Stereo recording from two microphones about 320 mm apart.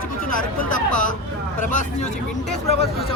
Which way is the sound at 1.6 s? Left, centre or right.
Left.